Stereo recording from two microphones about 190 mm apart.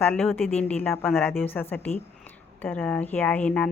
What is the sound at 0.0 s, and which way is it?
A woman's voice, 10° left (ahead or behind).